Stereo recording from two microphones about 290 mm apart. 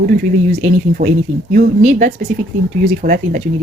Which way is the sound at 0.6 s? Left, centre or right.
Right.